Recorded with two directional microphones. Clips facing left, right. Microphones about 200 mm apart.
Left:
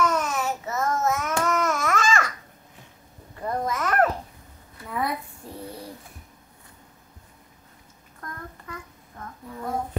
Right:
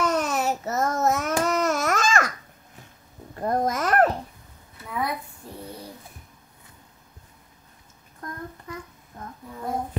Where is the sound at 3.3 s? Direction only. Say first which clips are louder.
Right 3 dB; 40° right (ahead or behind).